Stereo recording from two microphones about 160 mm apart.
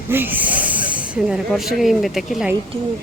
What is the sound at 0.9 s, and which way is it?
Speech, 5° right (ahead or behind).